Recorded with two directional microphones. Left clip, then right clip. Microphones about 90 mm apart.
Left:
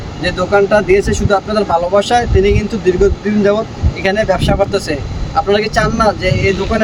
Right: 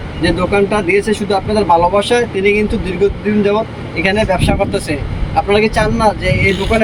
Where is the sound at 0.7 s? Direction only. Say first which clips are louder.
Left 2 dB; 60° left (ahead or behind).